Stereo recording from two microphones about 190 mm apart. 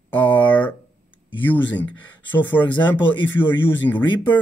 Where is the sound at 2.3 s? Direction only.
10° left (ahead or behind).